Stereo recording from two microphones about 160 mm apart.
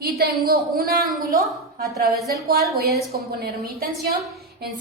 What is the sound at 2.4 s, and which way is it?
A woman's voice, 75° right (ahead or behind).